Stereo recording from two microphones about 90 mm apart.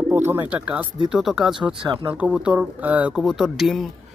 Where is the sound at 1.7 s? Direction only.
60° right (ahead or behind).